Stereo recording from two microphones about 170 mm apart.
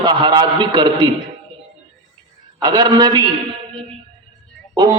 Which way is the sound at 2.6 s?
25° right (ahead or behind).